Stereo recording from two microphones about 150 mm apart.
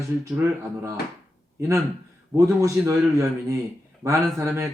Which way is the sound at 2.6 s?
20° right (ahead or behind).